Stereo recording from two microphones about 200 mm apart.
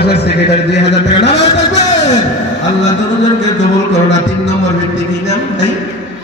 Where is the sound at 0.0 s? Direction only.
55° left (ahead or behind).